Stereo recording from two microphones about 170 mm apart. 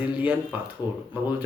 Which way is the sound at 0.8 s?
25° left (ahead or behind).